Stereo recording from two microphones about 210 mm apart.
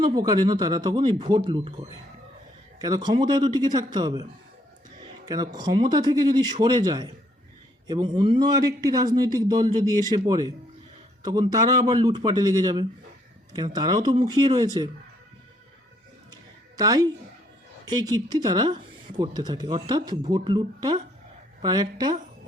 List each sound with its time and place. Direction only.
0.0 s speech: 20° right (ahead or behind)
2.7 s speech: 20° right (ahead or behind)
5.2 s a man's voice: 15° right (ahead or behind)
16.3 s a sound: 15° right (ahead or behind)
17.8 s speech: 20° right (ahead or behind)